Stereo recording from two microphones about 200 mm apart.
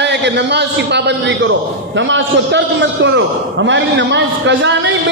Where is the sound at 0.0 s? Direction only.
60° right (ahead or behind).